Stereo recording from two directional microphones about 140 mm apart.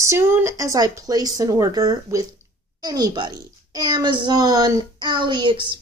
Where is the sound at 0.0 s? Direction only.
20° right (ahead or behind).